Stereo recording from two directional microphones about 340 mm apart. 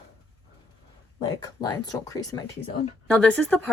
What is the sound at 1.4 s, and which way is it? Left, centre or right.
Speech, centre.